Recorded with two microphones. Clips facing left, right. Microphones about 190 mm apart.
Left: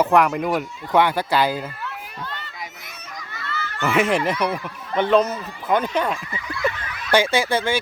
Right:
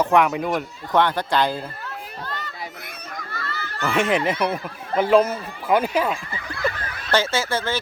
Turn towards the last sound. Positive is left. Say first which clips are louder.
# left 3 dB
turn(degrees=15)  # may be behind; listen again after turning